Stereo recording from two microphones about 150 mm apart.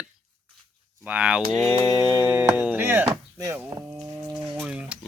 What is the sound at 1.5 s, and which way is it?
Mantra, 25° left (ahead or behind).